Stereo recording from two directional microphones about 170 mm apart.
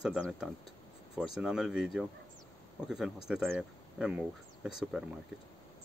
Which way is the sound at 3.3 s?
5° right (ahead or behind).